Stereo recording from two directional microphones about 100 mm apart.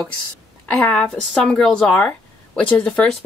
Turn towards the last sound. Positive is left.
turn(degrees=10)  # may be behind; listen again after turning